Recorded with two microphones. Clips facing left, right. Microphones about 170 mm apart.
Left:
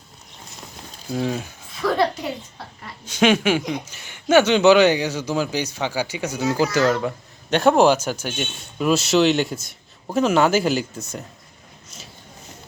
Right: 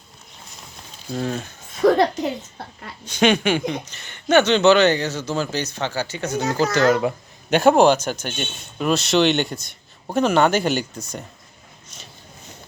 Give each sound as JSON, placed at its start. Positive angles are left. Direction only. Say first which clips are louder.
{"t": 1.1, "sound": "speech", "louder": "left 1 dB", "side_deg": 5}
{"t": 1.8, "sound": "a child's voice", "louder": "right 7 dB", "side_deg": -45}
{"t": 3.1, "sound": "speech", "louder": "even", "side_deg": 5}
{"t": 6.8, "sound": "speech", "louder": "right 2 dB", "side_deg": -10}